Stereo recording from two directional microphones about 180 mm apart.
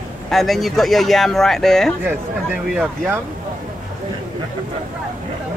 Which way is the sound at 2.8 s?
10° right (ahead or behind).